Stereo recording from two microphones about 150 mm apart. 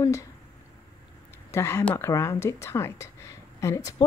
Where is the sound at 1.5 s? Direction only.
20° left (ahead or behind).